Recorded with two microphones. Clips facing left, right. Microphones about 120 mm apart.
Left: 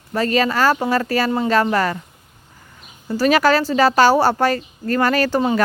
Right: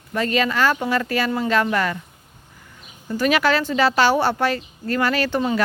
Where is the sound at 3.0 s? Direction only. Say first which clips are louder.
Left 4 dB; 35° left (ahead or behind).